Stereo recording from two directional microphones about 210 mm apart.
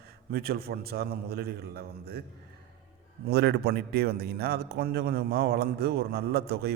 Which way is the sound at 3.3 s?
50° right (ahead or behind).